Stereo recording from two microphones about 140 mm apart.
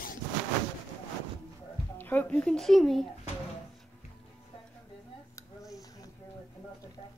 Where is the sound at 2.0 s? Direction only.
10° left (ahead or behind).